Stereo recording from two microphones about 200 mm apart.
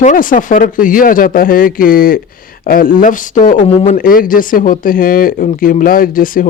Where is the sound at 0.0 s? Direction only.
40° left (ahead or behind).